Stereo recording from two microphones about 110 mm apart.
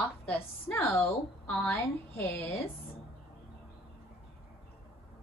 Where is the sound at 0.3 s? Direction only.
20° left (ahead or behind).